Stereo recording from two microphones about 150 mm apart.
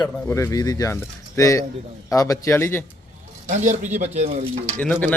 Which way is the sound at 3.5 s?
55° right (ahead or behind).